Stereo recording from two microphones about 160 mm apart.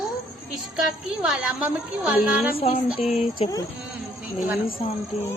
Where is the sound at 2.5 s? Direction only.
35° left (ahead or behind).